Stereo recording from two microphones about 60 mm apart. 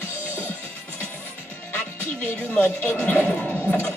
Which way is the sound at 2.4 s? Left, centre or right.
Left.